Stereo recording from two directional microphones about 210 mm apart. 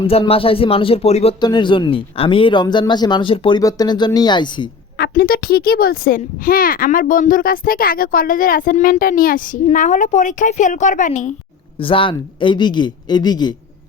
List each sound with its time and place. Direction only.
0.0 s speech: 30° left (ahead or behind)
4.9 s a child's voice: 45° left (ahead or behind)
11.8 s speech: 25° left (ahead or behind)